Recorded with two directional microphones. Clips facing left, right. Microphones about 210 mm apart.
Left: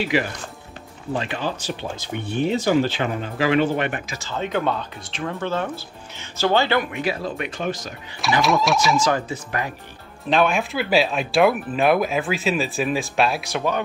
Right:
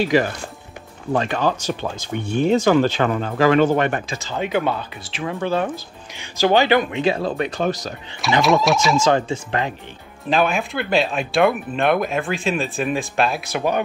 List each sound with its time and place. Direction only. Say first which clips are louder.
0.0 s speech: right 4 dB; 45° right (ahead or behind)
4.1 s speech: right 3 dB; 15° right (ahead or behind)
7.2 s speech: right 5 dB; 35° right (ahead or behind)
8.4 s speech: right 3 dB; centre (ahead or behind)
8.9 s speech: right 4 dB; 25° right (ahead or behind)
10.3 s speech: even; centre (ahead or behind)